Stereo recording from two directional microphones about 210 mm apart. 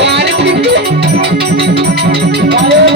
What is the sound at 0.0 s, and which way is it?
Music, 55° right (ahead or behind).